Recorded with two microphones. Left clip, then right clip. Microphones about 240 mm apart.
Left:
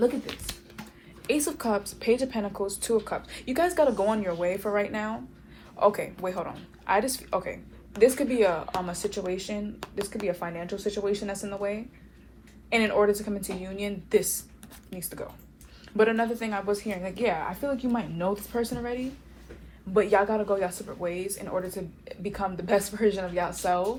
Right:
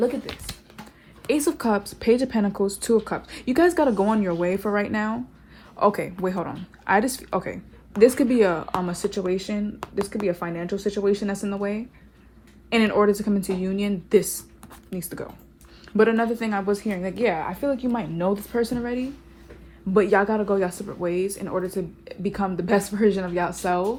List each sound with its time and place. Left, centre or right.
0.0 s speech: right